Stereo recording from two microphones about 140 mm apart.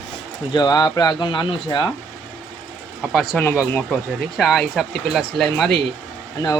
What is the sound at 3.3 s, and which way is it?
Speech, 5° left (ahead or behind).